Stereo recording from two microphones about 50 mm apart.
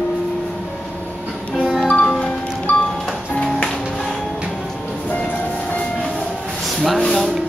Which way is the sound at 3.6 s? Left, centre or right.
Centre.